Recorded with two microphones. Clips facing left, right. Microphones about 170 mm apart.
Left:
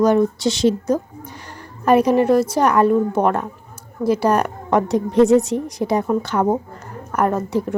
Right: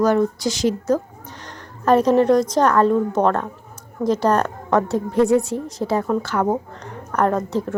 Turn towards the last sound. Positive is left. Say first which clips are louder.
# left 1 dB
turn(degrees=10)  # may be behind; listen again after turning